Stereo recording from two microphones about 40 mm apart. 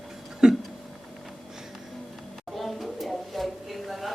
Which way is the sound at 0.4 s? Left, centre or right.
Centre.